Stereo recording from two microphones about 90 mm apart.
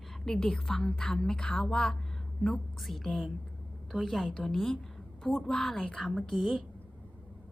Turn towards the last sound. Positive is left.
turn(degrees=0)  # may be behind; listen again after turning